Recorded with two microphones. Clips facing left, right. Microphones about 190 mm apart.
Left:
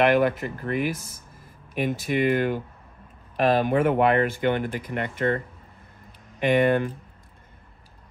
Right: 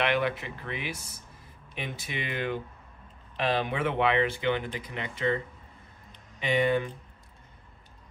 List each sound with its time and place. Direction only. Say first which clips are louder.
0.0 s speech: left 8 dB; 45° left (ahead or behind)
6.4 s speech: left 6 dB; 55° left (ahead or behind)